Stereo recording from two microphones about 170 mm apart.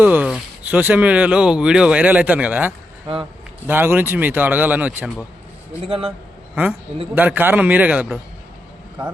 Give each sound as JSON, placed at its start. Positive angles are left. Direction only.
{"t": 0.0, "sound": "speech", "side_deg": -10}
{"t": 5.9, "sound": "a man's voice", "side_deg": -35}
{"t": 7.2, "sound": "speech", "side_deg": -10}